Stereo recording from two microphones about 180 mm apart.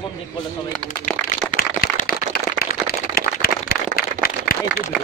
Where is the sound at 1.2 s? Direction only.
5° left (ahead or behind).